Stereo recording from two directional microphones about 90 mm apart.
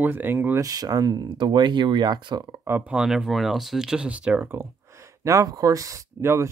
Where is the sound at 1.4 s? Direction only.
60° right (ahead or behind).